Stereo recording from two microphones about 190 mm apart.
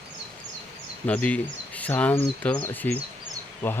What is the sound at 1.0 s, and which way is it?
Speech, 5° left (ahead or behind).